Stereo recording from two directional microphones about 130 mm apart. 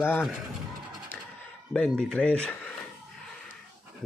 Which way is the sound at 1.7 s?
5° left (ahead or behind).